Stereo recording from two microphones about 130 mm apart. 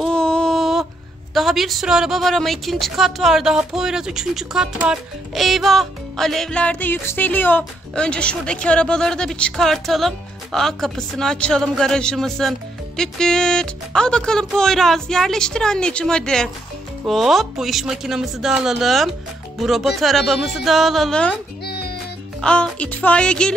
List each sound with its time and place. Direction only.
0.0 s a sound: 5° left (ahead or behind)
1.3 s a woman's voice: centre (ahead or behind)
22.4 s speech: 10° left (ahead or behind)